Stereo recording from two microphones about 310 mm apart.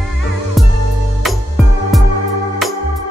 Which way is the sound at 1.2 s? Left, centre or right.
Centre.